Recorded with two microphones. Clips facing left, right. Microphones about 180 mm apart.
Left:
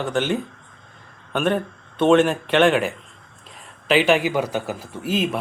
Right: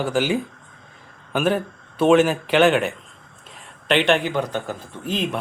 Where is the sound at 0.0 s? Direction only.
5° right (ahead or behind).